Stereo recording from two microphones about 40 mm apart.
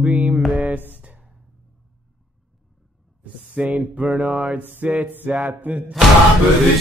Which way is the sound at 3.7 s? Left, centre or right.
Right.